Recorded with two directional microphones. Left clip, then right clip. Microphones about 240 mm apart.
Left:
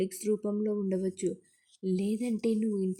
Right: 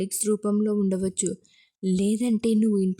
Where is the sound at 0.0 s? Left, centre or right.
Centre.